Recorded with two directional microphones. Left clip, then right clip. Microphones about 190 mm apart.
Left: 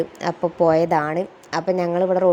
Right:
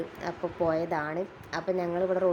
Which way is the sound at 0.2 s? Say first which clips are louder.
Left 11 dB; 40° left (ahead or behind).